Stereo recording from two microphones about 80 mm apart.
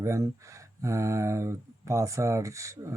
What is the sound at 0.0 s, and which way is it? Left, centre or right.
Speech, right.